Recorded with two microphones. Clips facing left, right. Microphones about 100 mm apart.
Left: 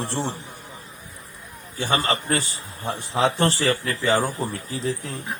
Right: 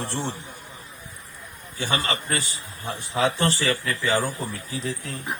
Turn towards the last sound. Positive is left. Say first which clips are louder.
# left 3 dB
turn(degrees=35)  # may be behind; listen again after turning